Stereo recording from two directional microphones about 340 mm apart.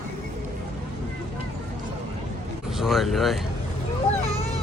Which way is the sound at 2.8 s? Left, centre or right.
Centre.